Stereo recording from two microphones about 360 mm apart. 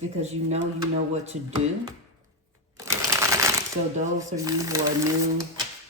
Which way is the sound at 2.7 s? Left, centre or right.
Centre.